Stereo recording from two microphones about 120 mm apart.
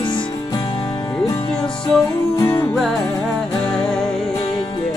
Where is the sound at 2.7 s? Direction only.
Centre (ahead or behind).